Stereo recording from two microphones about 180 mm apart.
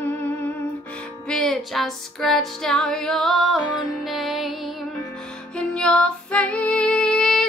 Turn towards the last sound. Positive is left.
turn(degrees=0)  # may be behind; listen again after turning